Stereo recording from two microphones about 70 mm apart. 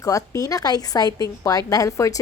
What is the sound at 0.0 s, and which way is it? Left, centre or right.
A woman's voice, left.